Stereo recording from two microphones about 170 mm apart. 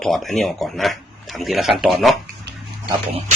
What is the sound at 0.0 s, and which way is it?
Speech, centre (ahead or behind).